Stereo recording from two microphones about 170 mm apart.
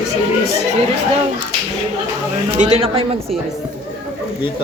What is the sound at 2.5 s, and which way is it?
Speech, 45° right (ahead or behind).